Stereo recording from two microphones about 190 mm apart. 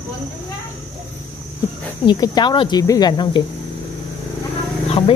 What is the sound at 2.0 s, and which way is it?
Speech, 20° left (ahead or behind).